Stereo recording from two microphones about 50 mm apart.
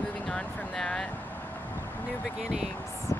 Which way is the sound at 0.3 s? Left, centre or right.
Centre.